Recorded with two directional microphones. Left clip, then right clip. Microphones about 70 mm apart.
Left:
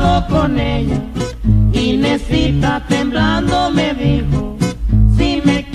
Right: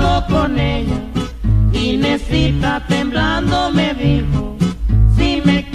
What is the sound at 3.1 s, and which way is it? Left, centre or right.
Music, left.